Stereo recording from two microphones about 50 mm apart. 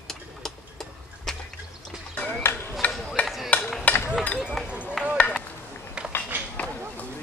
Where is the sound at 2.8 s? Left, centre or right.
Left.